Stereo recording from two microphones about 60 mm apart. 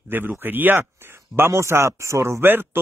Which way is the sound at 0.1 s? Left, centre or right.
Right.